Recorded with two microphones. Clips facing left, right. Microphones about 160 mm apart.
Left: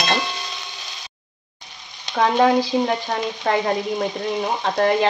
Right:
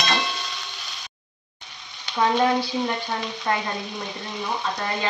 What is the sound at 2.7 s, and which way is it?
Speech, 60° left (ahead or behind).